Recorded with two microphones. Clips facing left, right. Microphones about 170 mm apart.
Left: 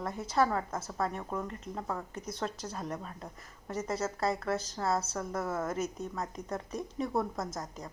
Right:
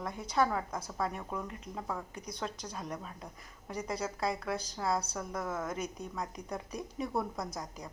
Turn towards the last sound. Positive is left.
turn(degrees=0)  # may be behind; listen again after turning